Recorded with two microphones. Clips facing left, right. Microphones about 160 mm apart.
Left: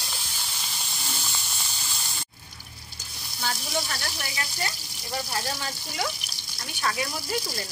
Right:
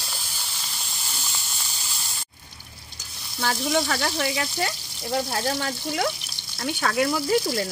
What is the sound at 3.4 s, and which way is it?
Speech, 65° right (ahead or behind).